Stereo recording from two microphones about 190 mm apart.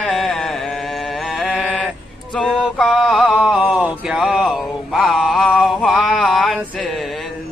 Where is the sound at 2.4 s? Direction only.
5° left (ahead or behind).